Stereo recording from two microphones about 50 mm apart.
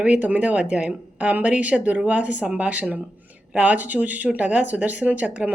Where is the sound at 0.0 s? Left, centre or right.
Right.